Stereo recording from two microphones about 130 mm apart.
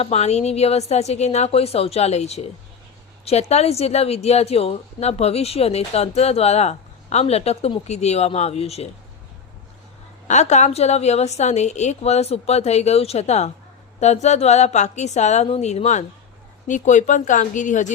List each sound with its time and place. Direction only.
0.0 s a woman's voice: 55° left (ahead or behind)
10.2 s a woman's voice: 65° left (ahead or behind)